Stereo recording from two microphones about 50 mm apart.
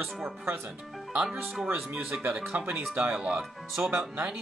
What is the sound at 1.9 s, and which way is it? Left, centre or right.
Speech, right.